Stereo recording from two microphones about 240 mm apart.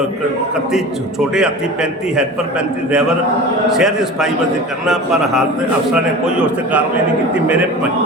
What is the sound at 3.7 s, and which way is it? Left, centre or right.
Speech, centre.